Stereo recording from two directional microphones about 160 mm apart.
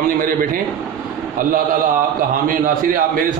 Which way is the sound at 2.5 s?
60° right (ahead or behind).